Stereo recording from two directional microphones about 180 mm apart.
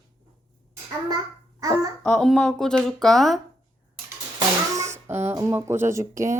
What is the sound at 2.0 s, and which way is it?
Speech, 5° left (ahead or behind).